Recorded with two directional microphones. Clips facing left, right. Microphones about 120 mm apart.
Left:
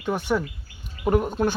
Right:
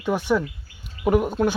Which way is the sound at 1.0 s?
5° right (ahead or behind).